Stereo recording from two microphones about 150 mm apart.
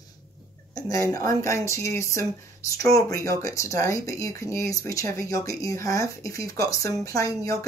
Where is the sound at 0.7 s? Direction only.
20° left (ahead or behind).